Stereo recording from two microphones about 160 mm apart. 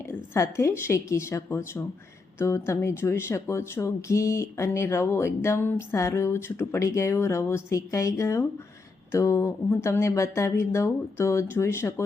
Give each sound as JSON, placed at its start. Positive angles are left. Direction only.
{"t": 0.0, "sound": "speech", "side_deg": 15}